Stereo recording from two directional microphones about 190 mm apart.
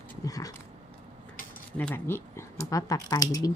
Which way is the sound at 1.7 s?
10° left (ahead or behind).